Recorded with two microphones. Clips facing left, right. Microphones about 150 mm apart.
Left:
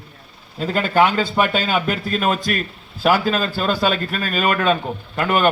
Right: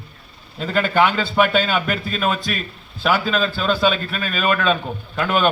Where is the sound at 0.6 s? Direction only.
10° left (ahead or behind).